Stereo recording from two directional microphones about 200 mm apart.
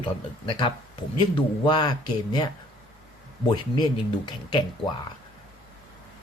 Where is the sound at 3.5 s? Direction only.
25° left (ahead or behind).